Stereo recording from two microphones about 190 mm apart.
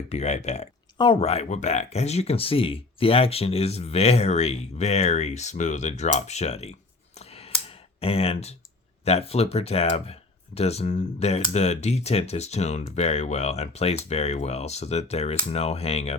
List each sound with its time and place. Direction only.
0.1 s speech: 35° left (ahead or behind)
7.2 s clicking: 35° left (ahead or behind)
9.0 s speech: 35° left (ahead or behind)